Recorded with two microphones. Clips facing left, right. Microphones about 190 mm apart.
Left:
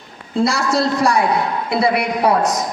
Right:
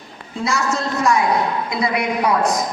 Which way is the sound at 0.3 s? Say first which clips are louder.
Left 5 dB; 35° left (ahead or behind).